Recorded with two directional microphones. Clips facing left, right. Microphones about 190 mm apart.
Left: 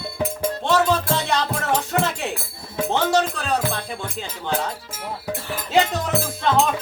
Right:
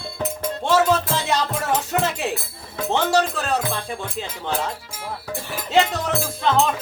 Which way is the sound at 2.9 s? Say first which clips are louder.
Right 1 dB; centre (ahead or behind).